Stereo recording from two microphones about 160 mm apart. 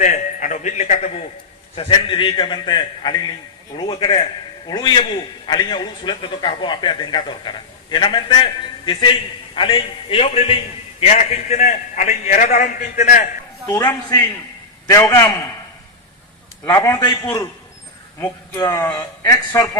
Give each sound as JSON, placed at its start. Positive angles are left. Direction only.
{"t": 0.0, "sound": "a man's voice", "side_deg": 50}
{"t": 1.7, "sound": "a man's voice", "side_deg": 35}
{"t": 13.7, "sound": "a man's voice", "side_deg": 20}
{"t": 16.6, "sound": "a man's voice", "side_deg": 20}
{"t": 18.6, "sound": "a man's voice", "side_deg": 20}